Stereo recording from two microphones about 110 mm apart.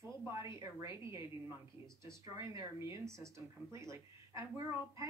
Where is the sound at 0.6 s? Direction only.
30° right (ahead or behind).